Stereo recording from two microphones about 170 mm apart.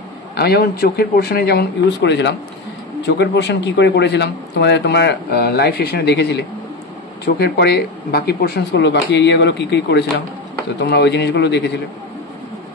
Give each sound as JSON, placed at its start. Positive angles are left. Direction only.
{"t": 0.4, "sound": "a man's voice", "side_deg": 65}